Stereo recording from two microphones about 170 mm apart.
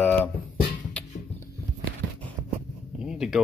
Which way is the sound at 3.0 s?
5° right (ahead or behind).